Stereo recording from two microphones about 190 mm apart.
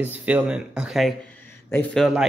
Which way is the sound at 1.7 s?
10° left (ahead or behind).